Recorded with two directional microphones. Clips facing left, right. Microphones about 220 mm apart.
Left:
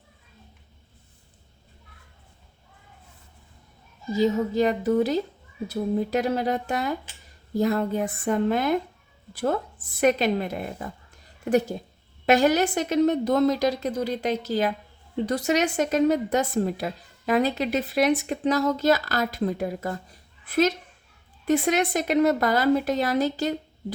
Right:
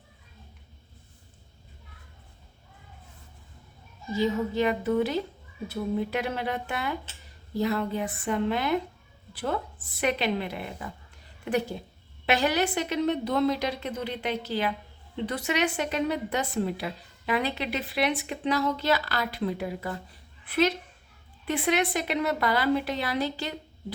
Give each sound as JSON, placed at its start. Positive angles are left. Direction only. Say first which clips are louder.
{"t": 4.1, "sound": "a woman's voice", "louder": "left 4 dB", "side_deg": 40}
{"t": 10.0, "sound": "a woman's voice", "louder": "left 6 dB", "side_deg": 45}